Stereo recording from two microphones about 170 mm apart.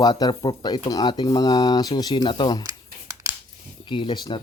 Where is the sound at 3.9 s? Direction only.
30° left (ahead or behind).